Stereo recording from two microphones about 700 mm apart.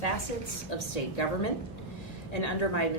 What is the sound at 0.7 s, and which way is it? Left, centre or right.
A woman's voice, left.